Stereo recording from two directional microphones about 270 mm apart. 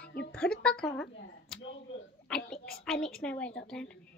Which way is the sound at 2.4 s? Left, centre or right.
Left.